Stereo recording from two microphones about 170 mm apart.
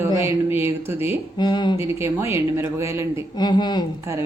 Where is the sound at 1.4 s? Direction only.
25° left (ahead or behind).